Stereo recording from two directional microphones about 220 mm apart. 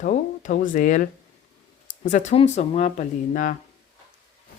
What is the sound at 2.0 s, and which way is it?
Speech, 35° left (ahead or behind).